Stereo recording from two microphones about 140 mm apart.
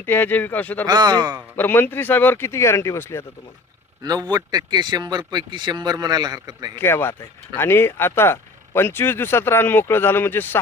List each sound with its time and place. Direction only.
0.0 s speech: 15° left (ahead or behind)
0.9 s speech: 30° right (ahead or behind)
1.5 s speech: 15° left (ahead or behind)
4.0 s speech: 30° right (ahead or behind)
6.7 s speech: 15° left (ahead or behind)